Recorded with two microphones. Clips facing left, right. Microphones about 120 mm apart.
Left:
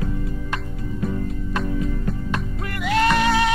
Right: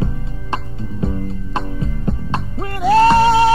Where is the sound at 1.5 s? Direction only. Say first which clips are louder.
Even; 30° right (ahead or behind).